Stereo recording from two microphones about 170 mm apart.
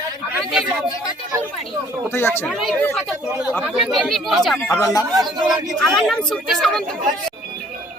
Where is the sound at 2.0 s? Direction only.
15° left (ahead or behind).